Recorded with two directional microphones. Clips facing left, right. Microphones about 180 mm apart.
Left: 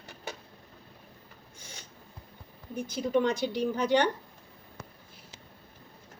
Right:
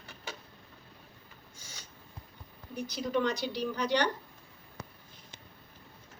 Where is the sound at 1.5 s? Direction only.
55° left (ahead or behind).